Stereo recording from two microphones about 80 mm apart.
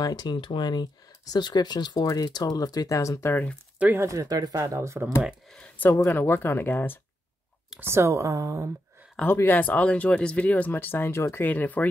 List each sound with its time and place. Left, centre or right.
0.0 s speech: left
4.0 s speech: right
6.0 s speech: left
7.8 s speech: right
9.2 s speech: left
11.4 s speech: left